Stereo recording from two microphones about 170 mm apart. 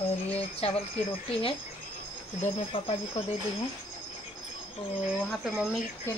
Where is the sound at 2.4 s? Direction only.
35° left (ahead or behind).